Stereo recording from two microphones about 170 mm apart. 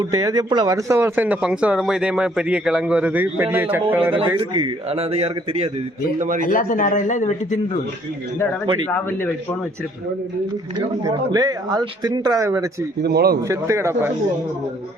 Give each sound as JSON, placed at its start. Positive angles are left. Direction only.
{"t": 0.0, "sound": "speech", "side_deg": -20}
{"t": 4.4, "sound": "speech", "side_deg": -30}
{"t": 6.1, "sound": "a man's voice", "side_deg": -50}
{"t": 6.4, "sound": "a man's voice", "side_deg": 55}
{"t": 8.9, "sound": "a man's voice", "side_deg": 10}
{"t": 10.8, "sound": "speech", "side_deg": -20}
{"t": 13.0, "sound": "speech", "side_deg": -65}
{"t": 13.5, "sound": "speech", "side_deg": -15}